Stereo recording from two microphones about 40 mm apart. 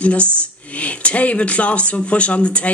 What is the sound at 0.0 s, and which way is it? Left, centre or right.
Speech, left.